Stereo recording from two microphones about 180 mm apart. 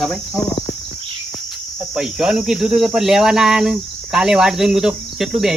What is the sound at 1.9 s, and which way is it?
Speech, 5° right (ahead or behind).